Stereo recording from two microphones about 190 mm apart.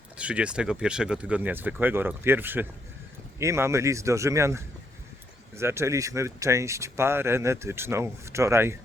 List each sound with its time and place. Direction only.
0.2 s speech: 5° right (ahead or behind)